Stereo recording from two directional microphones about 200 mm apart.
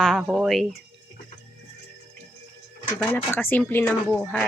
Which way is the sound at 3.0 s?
10° left (ahead or behind).